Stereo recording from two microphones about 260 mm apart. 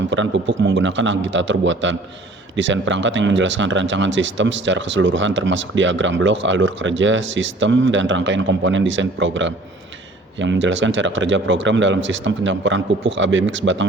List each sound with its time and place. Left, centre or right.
0.1 s speech: right